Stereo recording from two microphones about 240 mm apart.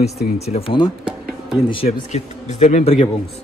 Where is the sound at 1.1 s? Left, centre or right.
Centre.